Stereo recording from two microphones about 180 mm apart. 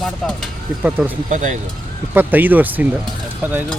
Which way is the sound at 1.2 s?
45° right (ahead or behind).